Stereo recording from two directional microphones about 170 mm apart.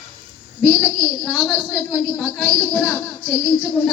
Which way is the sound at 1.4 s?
5° right (ahead or behind).